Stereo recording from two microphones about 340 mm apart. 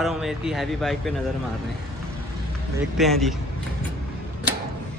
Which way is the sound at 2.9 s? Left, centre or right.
Centre.